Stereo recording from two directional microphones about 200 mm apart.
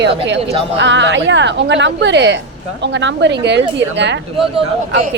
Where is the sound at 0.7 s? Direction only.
65° right (ahead or behind).